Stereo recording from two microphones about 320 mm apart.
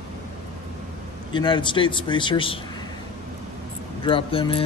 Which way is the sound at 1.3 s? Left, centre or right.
Centre.